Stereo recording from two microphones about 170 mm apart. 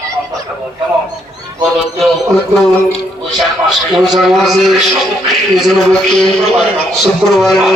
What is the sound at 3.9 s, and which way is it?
A man's voice, centre (ahead or behind).